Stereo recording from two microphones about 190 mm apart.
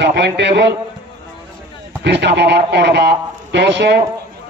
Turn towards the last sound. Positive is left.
turn(degrees=-65)  # may be behind; listen again after turning